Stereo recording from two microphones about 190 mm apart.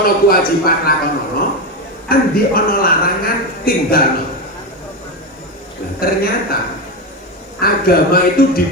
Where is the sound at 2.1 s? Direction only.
50° left (ahead or behind).